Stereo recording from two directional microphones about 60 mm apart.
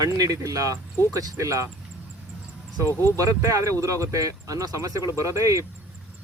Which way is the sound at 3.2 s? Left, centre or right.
Right.